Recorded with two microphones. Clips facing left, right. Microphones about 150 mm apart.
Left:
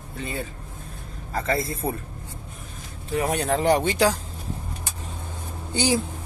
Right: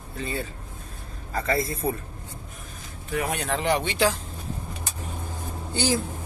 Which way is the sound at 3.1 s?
35° left (ahead or behind).